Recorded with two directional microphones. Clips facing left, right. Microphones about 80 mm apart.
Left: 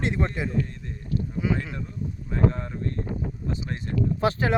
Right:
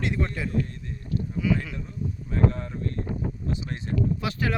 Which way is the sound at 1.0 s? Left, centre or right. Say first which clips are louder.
Left 1 dB; centre.